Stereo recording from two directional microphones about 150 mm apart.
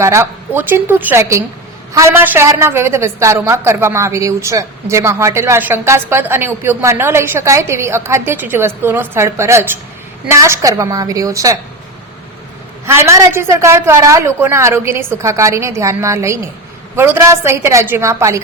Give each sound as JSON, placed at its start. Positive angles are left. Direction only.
{"t": 0.0, "sound": "a woman's voice", "side_deg": -20}
{"t": 12.8, "sound": "a woman's voice", "side_deg": -15}